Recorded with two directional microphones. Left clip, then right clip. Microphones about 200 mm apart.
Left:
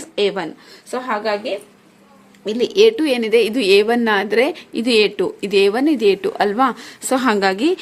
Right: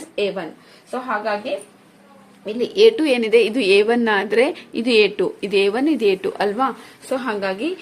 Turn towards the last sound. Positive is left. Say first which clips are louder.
# left 7 dB
turn(degrees=40)  # may be behind; listen again after turning